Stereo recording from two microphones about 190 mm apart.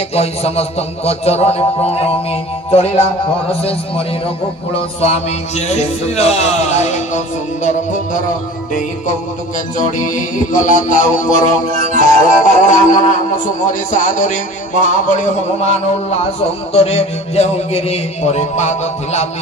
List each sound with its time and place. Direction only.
0.1 s music: 30° left (ahead or behind)
3.4 s music: 30° left (ahead or behind)
9.8 s music: 45° left (ahead or behind)